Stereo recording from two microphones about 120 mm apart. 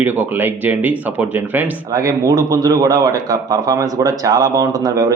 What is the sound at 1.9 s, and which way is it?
Speech, 30° right (ahead or behind).